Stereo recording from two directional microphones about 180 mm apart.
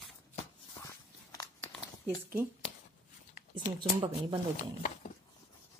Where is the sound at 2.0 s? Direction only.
15° right (ahead or behind).